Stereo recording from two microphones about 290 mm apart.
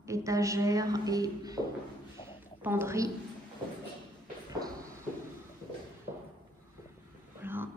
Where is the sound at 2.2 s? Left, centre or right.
Centre.